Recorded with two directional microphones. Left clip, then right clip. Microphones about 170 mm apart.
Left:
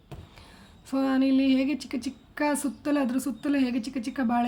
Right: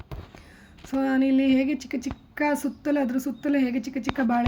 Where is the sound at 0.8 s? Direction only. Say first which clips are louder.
Right 1 dB; 5° right (ahead or behind).